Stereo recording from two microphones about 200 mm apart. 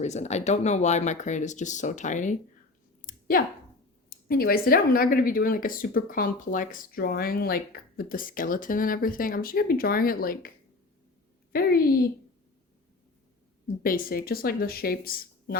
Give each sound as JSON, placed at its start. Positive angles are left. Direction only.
{"t": 0.0, "sound": "speech", "side_deg": 35}
{"t": 3.0, "sound": "clicking", "side_deg": 45}
{"t": 4.1, "sound": "speech", "side_deg": 50}
{"t": 11.5, "sound": "speech", "side_deg": 50}
{"t": 13.8, "sound": "speech", "side_deg": 45}